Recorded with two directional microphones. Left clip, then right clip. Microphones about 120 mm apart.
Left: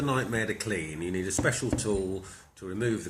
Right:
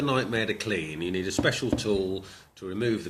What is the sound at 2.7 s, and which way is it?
Speech, 45° right (ahead or behind).